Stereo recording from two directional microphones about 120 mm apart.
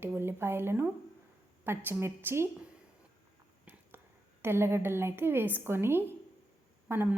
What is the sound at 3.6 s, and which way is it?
A woman's voice, 15° right (ahead or behind).